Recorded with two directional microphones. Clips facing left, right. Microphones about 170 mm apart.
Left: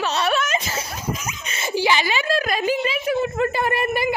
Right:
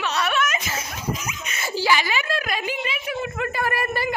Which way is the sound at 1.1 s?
50° left (ahead or behind).